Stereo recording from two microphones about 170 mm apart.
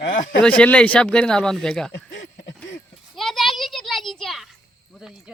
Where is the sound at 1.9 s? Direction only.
90° left.